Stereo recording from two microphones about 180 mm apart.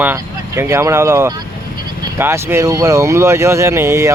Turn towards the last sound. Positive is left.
turn(degrees=-15)  # may be behind; listen again after turning